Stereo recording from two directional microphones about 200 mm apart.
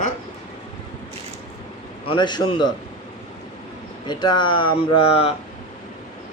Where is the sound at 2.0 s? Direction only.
20° left (ahead or behind).